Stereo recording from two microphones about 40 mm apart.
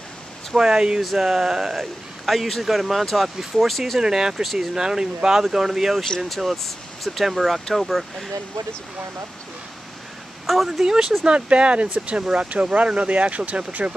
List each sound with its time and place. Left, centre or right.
0.6 s speech: centre
2.2 s speech: centre
4.0 s speech: centre
6.0 s speech: centre
10.4 s a sound: centre
10.8 s speech: centre
11.2 s speech: right